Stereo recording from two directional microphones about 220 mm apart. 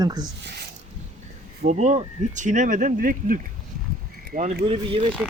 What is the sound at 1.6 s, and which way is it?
Speech, 35° right (ahead or behind).